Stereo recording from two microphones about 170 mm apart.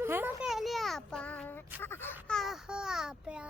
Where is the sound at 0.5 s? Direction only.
Centre (ahead or behind).